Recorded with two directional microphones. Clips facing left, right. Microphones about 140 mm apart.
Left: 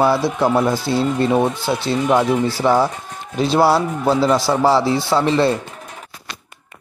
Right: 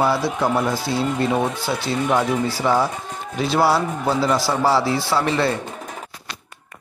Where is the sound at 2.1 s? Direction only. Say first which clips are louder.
Left 4 dB; 25° left (ahead or behind).